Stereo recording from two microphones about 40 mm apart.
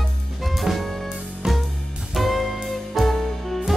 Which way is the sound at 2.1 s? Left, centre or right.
Centre.